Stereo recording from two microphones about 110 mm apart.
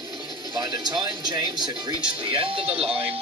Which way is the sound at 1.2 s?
40° right (ahead or behind).